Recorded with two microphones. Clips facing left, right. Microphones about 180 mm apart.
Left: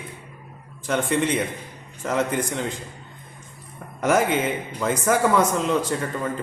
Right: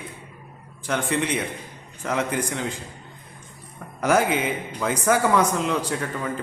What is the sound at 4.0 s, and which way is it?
A man's voice, centre (ahead or behind).